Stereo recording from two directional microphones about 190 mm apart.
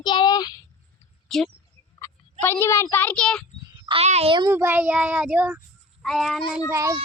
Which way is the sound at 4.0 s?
35° right (ahead or behind).